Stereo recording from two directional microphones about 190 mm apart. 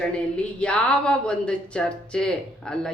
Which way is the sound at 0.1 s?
5° left (ahead or behind).